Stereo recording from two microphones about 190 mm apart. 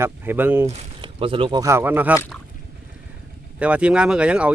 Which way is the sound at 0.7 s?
30° right (ahead or behind).